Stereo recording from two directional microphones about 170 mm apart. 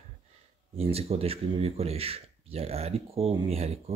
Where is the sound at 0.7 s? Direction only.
35° right (ahead or behind).